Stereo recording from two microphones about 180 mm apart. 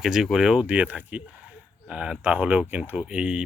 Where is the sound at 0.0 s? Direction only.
Centre (ahead or behind).